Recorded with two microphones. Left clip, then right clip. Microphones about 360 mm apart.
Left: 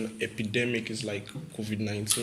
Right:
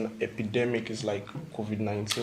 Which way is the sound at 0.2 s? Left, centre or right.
Centre.